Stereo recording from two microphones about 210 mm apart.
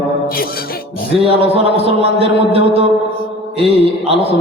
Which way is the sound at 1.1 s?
25° right (ahead or behind).